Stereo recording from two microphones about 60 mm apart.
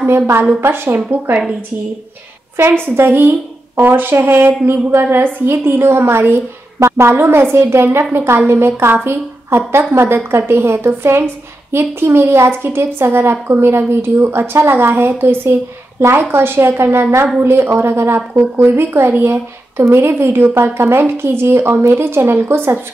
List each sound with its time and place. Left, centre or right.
0.0 s a woman's voice: right
3.0 s a woman's voice: right